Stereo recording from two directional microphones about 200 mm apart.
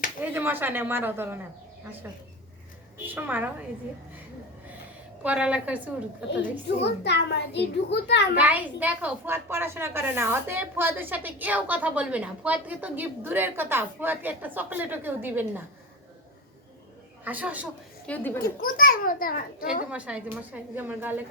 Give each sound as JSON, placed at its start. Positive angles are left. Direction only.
{"t": 0.2, "sound": "a woman's voice", "side_deg": -10}
{"t": 5.2, "sound": "a woman's voice", "side_deg": -5}
{"t": 6.8, "sound": "a child's voice", "side_deg": 60}
{"t": 8.4, "sound": "a woman's voice", "side_deg": -10}
{"t": 17.2, "sound": "a woman's voice", "side_deg": -10}
{"t": 18.0, "sound": "a woman's voice", "side_deg": 10}
{"t": 18.6, "sound": "a child's voice", "side_deg": 45}
{"t": 19.9, "sound": "a woman's voice", "side_deg": -5}